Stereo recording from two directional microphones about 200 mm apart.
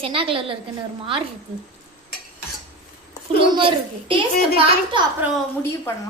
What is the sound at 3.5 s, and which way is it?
A woman's voice, 25° right (ahead or behind).